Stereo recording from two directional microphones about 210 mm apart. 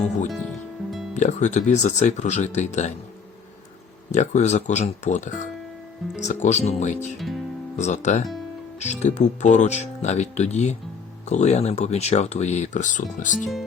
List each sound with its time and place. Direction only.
0.3 s music: centre (ahead or behind)
1.1 s speech: 35° left (ahead or behind)
4.1 s speech: 35° left (ahead or behind)
7.2 s speech: centre (ahead or behind)
7.8 s speech: 35° left (ahead or behind)